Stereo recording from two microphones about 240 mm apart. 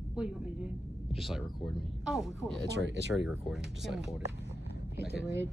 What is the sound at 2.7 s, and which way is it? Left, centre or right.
Speech, right.